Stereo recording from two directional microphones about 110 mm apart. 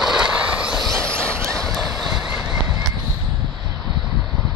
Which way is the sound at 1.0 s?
25° right (ahead or behind).